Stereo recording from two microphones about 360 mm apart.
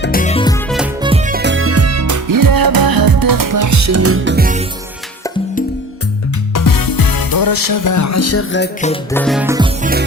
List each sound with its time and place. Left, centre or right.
0.0 s music: left
1.0 s music: centre
6.5 s music: left
9.1 s music: centre